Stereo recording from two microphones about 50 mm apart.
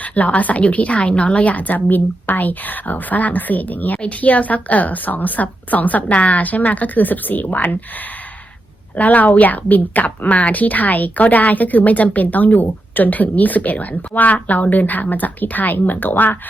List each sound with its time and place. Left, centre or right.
0.0 s a woman's voice: left
9.0 s a woman's voice: left